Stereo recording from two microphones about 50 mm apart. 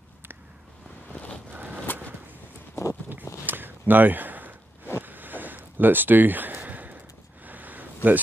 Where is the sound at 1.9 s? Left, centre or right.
Left.